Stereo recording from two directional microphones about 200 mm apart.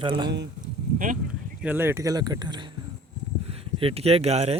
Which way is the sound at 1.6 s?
10° right (ahead or behind).